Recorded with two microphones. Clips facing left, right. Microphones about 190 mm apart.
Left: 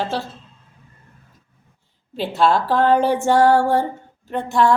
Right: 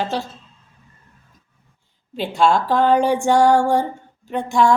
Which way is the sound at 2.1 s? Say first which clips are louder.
Even; 5° left (ahead or behind).